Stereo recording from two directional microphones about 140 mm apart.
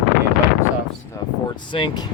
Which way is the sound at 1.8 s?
40° left (ahead or behind).